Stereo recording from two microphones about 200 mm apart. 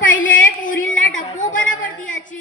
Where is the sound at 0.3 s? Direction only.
40° left (ahead or behind).